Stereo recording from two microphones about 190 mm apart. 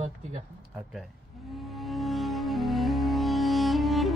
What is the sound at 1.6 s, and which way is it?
Music, centre (ahead or behind).